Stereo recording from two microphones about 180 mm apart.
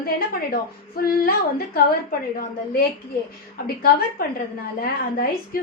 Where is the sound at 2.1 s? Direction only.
55° left (ahead or behind).